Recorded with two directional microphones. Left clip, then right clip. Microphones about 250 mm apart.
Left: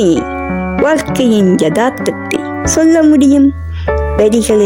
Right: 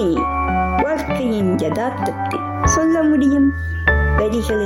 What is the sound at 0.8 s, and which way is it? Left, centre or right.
Speech, left.